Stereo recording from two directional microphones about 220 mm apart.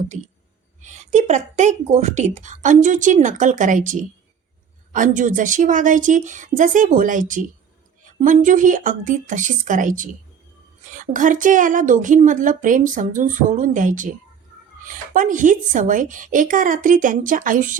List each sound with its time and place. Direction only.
0.1 s a woman's voice: 30° right (ahead or behind)